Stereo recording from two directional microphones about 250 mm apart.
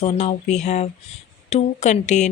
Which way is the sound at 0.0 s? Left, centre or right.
Left.